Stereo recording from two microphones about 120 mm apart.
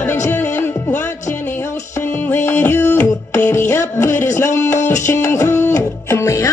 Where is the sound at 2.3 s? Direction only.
20° left (ahead or behind).